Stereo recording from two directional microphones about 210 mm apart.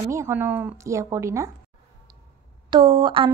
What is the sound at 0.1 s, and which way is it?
A woman's voice, 10° right (ahead or behind).